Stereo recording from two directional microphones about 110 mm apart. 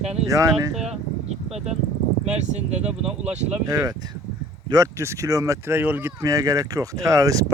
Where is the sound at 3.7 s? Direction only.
35° right (ahead or behind); by 6.1 s 20° right (ahead or behind).